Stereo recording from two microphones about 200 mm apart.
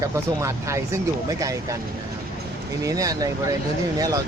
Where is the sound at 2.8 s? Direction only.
15° right (ahead or behind).